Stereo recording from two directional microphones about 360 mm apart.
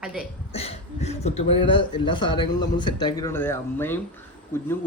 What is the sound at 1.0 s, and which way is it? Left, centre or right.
A man's voice, centre.